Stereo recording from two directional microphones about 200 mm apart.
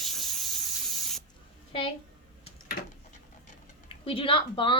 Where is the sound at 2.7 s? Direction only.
80° left.